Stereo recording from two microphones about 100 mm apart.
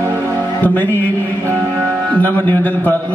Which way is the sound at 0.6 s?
20° left (ahead or behind).